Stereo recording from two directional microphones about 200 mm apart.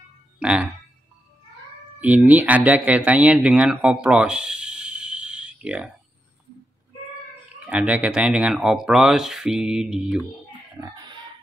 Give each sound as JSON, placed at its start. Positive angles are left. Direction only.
{"t": 0.4, "sound": "speech", "side_deg": -5}
{"t": 2.0, "sound": "speech", "side_deg": -5}
{"t": 7.6, "sound": "speech", "side_deg": -5}
{"t": 10.8, "sound": "music", "side_deg": -15}